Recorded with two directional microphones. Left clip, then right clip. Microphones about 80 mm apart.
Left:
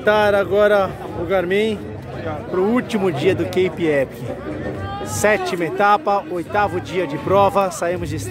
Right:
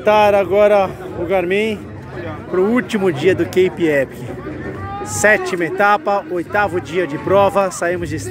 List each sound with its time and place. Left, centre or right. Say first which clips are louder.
0.0 s speech: right 3 dB; centre
2.5 s speech: right 3 dB; centre
5.2 s speech: right 4 dB; centre